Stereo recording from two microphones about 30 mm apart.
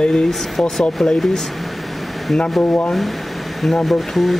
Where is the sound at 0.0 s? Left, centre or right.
Left.